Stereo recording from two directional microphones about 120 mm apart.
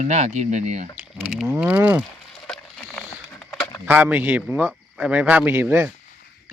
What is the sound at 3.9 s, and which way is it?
Speech, 15° right (ahead or behind).